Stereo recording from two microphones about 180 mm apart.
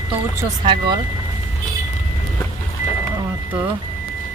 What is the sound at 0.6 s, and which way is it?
Speech, 30° right (ahead or behind).